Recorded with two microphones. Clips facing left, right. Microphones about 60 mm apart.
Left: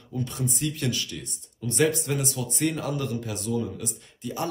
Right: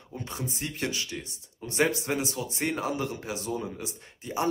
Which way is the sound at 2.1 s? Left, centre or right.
Right.